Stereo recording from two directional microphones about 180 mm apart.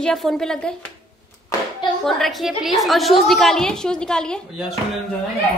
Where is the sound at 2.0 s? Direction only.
Centre (ahead or behind).